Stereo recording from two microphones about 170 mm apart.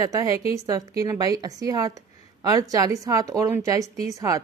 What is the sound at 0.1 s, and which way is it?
A woman's voice, 20° right (ahead or behind).